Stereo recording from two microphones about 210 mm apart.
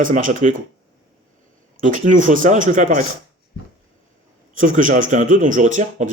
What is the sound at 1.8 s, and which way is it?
Speech, 40° right (ahead or behind).